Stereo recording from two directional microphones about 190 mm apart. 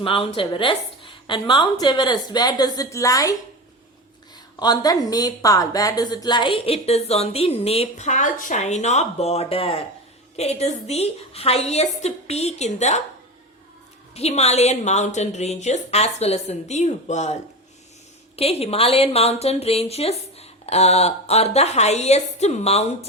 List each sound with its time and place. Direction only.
0.0 s a woman's voice: 30° left (ahead or behind)
4.6 s a woman's voice: 20° left (ahead or behind); by 13.0 s 35° left (ahead or behind)
14.1 s a woman's voice: 35° left (ahead or behind)
18.3 s a woman's voice: 30° left (ahead or behind)